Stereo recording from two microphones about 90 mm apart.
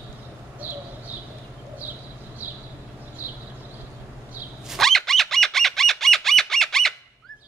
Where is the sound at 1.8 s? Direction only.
20° right (ahead or behind).